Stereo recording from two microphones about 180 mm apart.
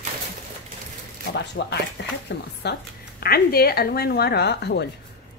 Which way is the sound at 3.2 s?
60° left (ahead or behind).